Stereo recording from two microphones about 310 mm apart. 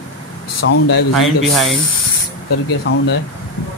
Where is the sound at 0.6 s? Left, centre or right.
Left.